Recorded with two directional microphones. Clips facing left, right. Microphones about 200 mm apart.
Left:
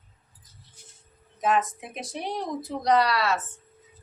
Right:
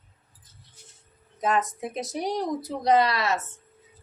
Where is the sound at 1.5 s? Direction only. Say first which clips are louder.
Left 1 dB; 40° right (ahead or behind).